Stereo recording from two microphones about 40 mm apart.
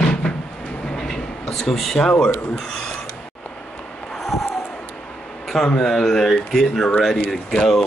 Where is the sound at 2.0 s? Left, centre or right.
Centre.